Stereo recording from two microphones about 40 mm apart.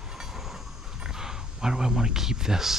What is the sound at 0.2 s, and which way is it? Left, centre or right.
Train, centre.